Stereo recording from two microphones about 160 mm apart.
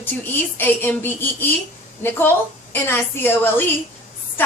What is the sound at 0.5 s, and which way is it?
A woman's voice, 10° left (ahead or behind).